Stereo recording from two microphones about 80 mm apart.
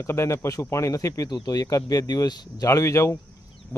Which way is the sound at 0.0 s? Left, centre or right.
Left.